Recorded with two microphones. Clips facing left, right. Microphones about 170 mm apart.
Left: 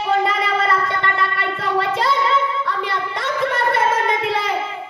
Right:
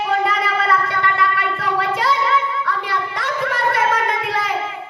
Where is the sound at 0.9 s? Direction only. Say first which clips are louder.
Right 2 dB; 25° left (ahead or behind).